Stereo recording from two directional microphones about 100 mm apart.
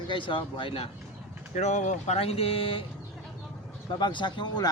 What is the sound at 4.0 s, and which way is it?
Speech, 50° left (ahead or behind).